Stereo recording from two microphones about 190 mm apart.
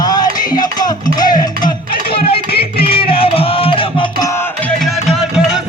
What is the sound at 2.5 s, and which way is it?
Music, 55° left (ahead or behind).